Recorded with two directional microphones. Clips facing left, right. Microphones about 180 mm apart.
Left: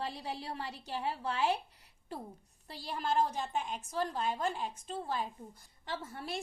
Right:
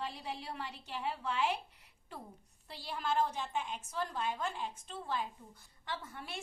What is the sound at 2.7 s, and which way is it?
A woman's voice, 40° left (ahead or behind).